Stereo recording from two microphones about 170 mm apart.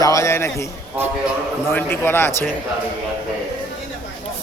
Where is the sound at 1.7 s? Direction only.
10° left (ahead or behind).